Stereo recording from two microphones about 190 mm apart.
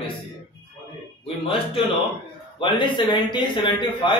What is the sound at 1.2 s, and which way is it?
A man's voice, 30° left (ahead or behind).